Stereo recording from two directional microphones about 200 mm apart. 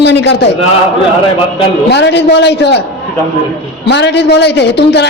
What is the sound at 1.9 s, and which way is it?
Speech, 60° left (ahead or behind).